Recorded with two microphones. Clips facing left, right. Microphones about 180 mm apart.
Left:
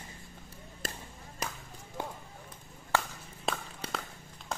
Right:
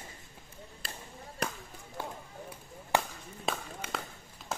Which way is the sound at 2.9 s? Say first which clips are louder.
Right 2 dB; 15° right (ahead or behind).